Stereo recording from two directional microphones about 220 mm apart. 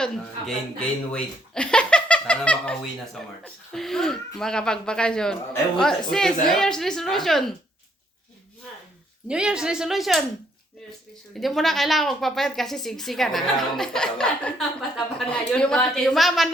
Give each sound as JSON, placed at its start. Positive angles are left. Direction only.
{"t": 1.1, "sound": "a woman's voice", "side_deg": 5}
{"t": 9.2, "sound": "a woman's voice", "side_deg": -5}
{"t": 11.3, "sound": "a woman's voice", "side_deg": 0}